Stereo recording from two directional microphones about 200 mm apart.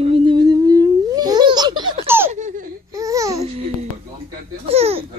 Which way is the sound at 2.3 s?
40° right (ahead or behind).